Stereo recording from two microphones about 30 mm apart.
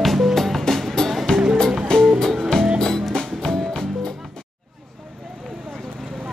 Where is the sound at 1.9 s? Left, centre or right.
Left.